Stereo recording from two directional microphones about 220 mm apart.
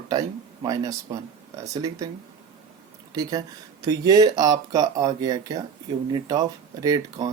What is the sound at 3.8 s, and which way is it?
Speech, 15° right (ahead or behind).